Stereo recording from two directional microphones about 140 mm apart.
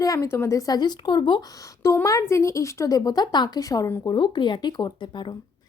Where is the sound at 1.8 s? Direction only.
20° left (ahead or behind).